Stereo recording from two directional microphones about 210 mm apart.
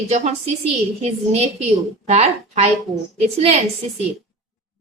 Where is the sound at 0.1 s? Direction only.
30° right (ahead or behind).